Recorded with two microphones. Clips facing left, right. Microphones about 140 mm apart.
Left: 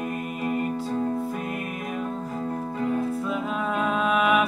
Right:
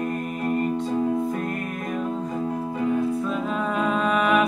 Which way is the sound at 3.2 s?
Centre (ahead or behind).